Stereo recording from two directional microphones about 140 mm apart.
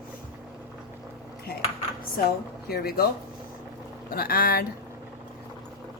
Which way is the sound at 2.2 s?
90° left.